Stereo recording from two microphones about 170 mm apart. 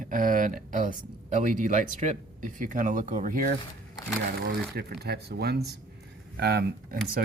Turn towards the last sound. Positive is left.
turn(degrees=-70)  # may be behind; listen again after turning